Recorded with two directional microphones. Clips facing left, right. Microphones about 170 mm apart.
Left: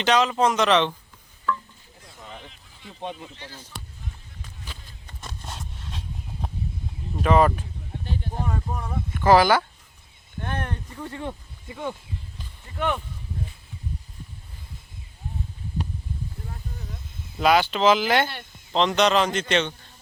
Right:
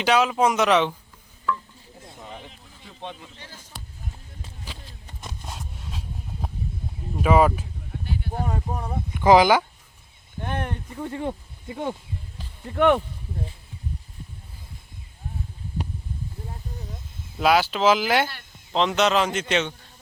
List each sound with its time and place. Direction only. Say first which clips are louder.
0.0 s speech: right 1 dB; 10° right (ahead or behind)
2.0 s a sound: right 2 dB; 20° right (ahead or behind)
3.0 s speech: left 3 dB; 15° left (ahead or behind)
5.2 s a sound: even; 10° right (ahead or behind)
7.2 s speech: right 1 dB; 5° right (ahead or behind)
8.4 s speech: right 1 dB; 30° right (ahead or behind)
8.8 s speech: right 2 dB; 15° right (ahead or behind)
12.7 s speech: right 8 dB; 65° right (ahead or behind)
17.3 s a man's voice: even; 5° right (ahead or behind)